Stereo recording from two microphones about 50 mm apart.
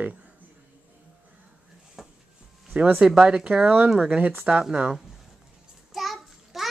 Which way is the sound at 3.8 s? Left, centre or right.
Centre.